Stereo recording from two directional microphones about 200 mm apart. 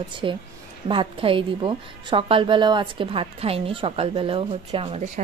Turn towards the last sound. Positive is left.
turn(degrees=-35)  # may be behind; listen again after turning